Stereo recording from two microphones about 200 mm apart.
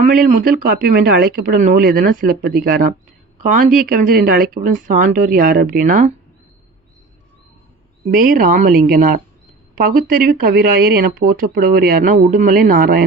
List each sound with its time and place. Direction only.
0.0 s speech: 40° right (ahead or behind)
8.1 s speech: 45° right (ahead or behind)